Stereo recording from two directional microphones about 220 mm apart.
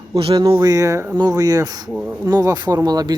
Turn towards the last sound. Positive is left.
turn(degrees=-15)  # may be behind; listen again after turning